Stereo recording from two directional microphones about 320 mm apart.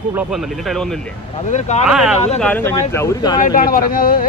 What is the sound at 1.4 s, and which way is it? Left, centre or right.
Speech, left.